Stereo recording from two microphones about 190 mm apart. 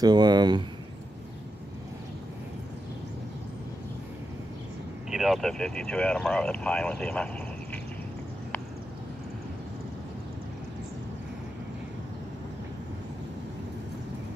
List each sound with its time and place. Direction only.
0.0 s speech: 20° right (ahead or behind)
5.1 s speech: centre (ahead or behind)